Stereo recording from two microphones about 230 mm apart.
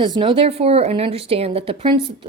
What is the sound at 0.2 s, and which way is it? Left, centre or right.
A woman's voice, right.